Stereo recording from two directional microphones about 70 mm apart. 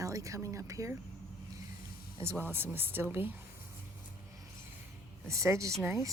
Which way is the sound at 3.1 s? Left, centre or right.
Right.